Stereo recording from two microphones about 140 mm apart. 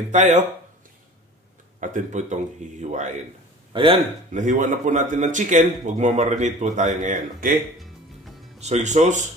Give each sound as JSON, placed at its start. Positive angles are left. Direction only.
{"t": 0.1, "sound": "a man's voice", "side_deg": -60}
{"t": 1.8, "sound": "a man's voice", "side_deg": -65}
{"t": 3.7, "sound": "a man's voice", "side_deg": -40}
{"t": 4.3, "sound": "a man's voice", "side_deg": -60}
{"t": 8.5, "sound": "a man's voice", "side_deg": -55}